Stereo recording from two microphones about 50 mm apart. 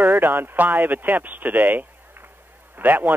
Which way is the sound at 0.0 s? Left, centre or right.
Right.